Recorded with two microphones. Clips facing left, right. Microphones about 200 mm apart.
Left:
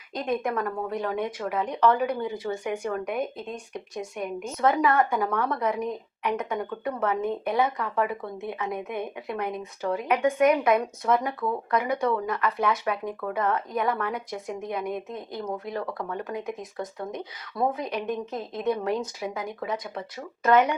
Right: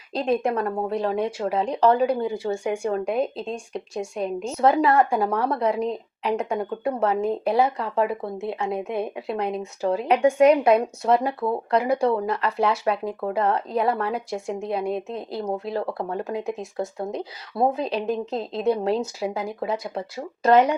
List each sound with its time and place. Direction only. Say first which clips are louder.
0.1 s speech: right 5 dB; 30° right (ahead or behind)